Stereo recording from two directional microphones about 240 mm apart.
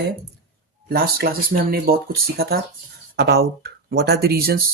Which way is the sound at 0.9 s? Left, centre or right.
Right.